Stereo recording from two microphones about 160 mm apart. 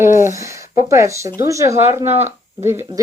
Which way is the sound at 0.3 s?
20° right (ahead or behind).